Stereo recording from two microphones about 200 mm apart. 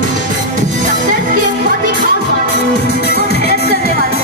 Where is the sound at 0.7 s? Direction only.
40° right (ahead or behind).